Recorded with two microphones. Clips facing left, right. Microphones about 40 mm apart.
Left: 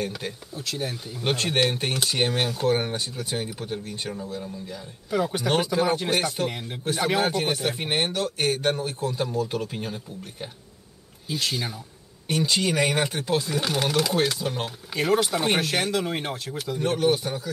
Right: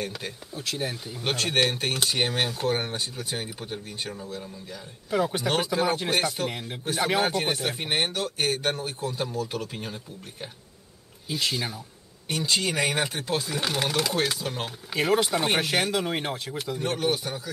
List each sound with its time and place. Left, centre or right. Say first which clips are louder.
0.0 s speech: left 3 dB; centre
1.3 s speech: left 1 dB; centre